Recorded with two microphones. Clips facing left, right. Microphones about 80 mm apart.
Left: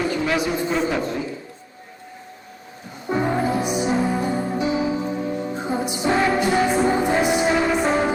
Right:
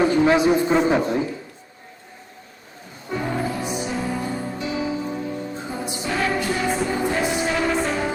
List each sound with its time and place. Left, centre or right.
0.0 s a man's voice: right
3.1 s music: left